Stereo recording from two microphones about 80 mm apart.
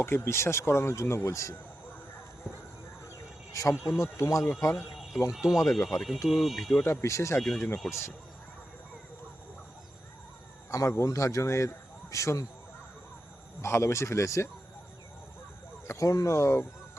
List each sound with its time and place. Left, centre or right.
0.0 s speech: left
3.5 s speech: left
5.3 s speech: centre
6.8 s speech: left
7.4 s speech: centre
7.9 s speech: left
10.7 s speech: left
13.6 s speech: left
15.9 s speech: left